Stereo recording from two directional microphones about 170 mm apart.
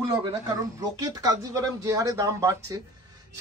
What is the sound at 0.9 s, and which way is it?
Speech, 20° right (ahead or behind).